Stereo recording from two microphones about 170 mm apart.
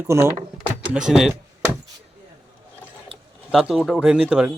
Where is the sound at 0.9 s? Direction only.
5° right (ahead or behind).